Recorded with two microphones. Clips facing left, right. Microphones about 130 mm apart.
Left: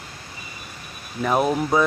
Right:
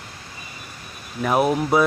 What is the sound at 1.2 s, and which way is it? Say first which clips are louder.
Speech: right 1 dB; 5° right (ahead or behind).